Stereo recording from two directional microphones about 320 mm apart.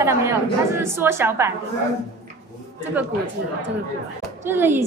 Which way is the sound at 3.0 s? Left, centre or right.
Centre.